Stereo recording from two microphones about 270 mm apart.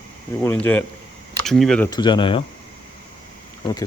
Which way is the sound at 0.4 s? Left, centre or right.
Centre.